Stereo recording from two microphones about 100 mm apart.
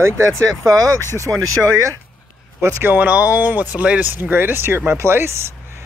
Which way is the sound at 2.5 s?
25° right (ahead or behind).